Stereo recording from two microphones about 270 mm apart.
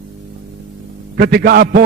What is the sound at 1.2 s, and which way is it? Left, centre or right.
Speech, right.